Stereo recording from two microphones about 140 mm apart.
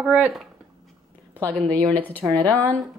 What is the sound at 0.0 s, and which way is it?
Speech, 5° right (ahead or behind).